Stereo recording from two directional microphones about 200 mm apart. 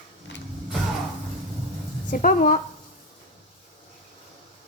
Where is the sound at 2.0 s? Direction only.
40° left (ahead or behind).